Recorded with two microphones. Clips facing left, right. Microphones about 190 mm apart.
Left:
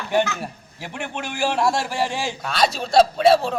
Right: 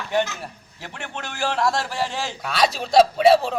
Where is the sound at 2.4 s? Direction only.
5° right (ahead or behind).